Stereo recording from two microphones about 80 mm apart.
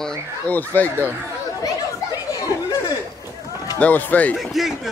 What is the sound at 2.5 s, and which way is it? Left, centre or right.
Chatter, left.